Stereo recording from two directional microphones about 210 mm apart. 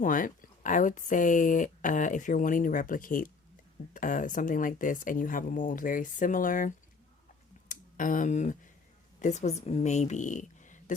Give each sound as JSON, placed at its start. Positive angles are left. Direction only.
{"t": 0.0, "sound": "speech", "side_deg": 40}